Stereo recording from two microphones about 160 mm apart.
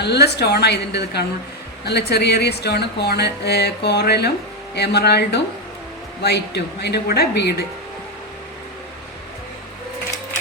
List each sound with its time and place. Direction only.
0.0 s speech: 90° left